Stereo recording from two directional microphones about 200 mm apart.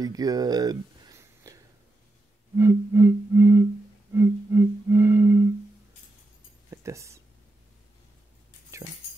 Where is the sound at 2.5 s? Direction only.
10° right (ahead or behind).